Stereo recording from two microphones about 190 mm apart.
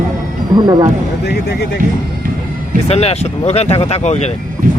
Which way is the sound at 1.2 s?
60° left (ahead or behind).